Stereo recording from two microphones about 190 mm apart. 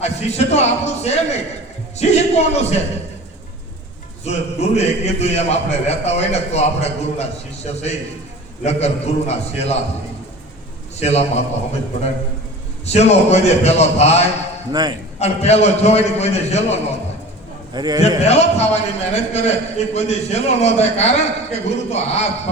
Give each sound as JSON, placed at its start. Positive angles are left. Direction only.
{"t": 0.0, "sound": "a man's voice", "side_deg": 35}
{"t": 4.2, "sound": "a man's voice", "side_deg": 35}
{"t": 11.0, "sound": "a man's voice", "side_deg": 35}
{"t": 12.8, "sound": "a man's voice", "side_deg": 35}
{"t": 14.7, "sound": "a man's voice", "side_deg": -20}
{"t": 15.2, "sound": "a man's voice", "side_deg": 35}
{"t": 17.7, "sound": "a man's voice", "side_deg": -20}
{"t": 18.3, "sound": "a man's voice", "side_deg": 35}